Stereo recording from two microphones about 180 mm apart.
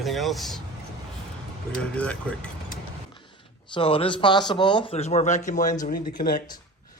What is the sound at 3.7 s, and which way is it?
A man's voice, 30° left (ahead or behind).